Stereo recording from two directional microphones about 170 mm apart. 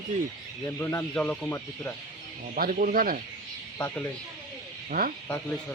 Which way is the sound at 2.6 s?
55° right (ahead or behind).